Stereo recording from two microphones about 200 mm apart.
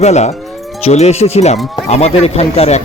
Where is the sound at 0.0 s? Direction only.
35° left (ahead or behind).